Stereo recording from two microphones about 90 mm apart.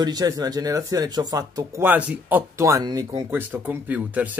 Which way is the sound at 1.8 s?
20° right (ahead or behind).